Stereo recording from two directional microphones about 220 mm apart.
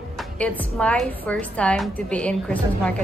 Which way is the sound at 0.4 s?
5° left (ahead or behind).